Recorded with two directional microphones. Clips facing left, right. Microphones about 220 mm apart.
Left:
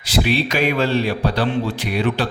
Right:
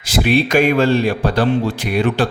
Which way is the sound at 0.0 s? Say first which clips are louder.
Right 4 dB; 50° right (ahead or behind).